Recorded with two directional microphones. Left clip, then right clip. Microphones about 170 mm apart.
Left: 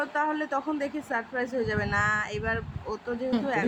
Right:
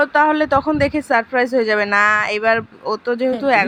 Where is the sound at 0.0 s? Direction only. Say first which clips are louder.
Right 14 dB; 50° right (ahead or behind).